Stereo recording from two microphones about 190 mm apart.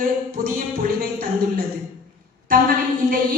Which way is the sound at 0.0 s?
50° right (ahead or behind).